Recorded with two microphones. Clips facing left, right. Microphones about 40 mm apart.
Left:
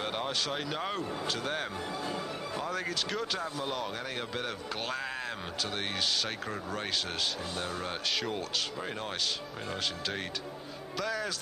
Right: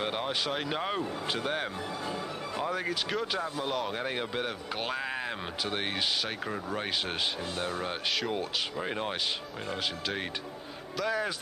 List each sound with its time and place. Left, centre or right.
0.0 s speech: centre
3.9 s speech: right
9.7 s speech: centre